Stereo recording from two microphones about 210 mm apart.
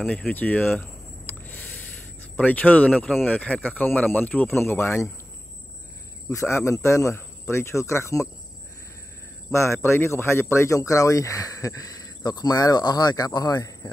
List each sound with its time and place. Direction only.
0.0 s a sound: 5° left (ahead or behind)
2.3 s speech: 10° left (ahead or behind)
6.3 s speech: 15° left (ahead or behind)
9.5 s speech: 10° left (ahead or behind)